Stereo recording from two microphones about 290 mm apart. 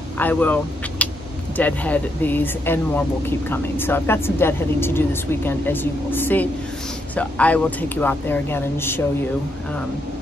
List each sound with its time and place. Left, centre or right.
0.2 s speech: centre